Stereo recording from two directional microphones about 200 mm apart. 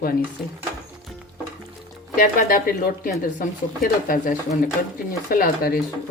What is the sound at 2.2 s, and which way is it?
Speech, 45° left (ahead or behind).